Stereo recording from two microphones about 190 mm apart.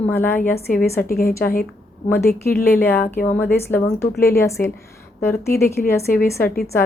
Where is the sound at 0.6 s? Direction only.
50° left (ahead or behind).